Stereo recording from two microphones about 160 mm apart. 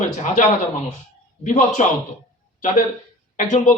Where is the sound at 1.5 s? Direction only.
50° left (ahead or behind).